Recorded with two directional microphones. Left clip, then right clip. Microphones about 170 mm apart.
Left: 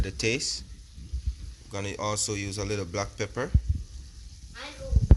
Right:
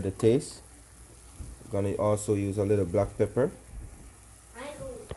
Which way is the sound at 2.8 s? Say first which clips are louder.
Right 5 dB; 10° left (ahead or behind).